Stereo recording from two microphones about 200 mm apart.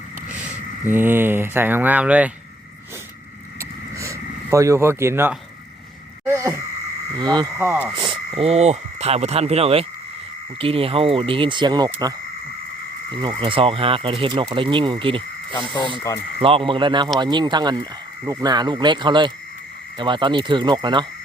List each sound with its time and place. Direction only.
0.9 s speech: 10° right (ahead or behind)
3.9 s a sound: 15° right (ahead or behind)
6.2 s speech: 10° right (ahead or behind)
7.9 s speech: 25° right (ahead or behind)
13.2 s speech: 25° right (ahead or behind)
15.9 s speech: 15° left (ahead or behind)
16.4 s speech: 25° right (ahead or behind)